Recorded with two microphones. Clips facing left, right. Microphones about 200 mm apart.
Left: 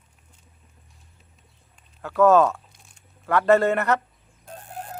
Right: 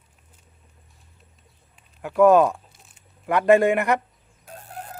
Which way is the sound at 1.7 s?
15° right (ahead or behind).